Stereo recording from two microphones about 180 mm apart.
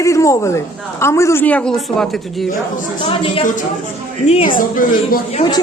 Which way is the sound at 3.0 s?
30° left (ahead or behind).